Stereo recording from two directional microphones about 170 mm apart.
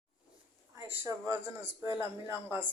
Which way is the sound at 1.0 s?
15° right (ahead or behind).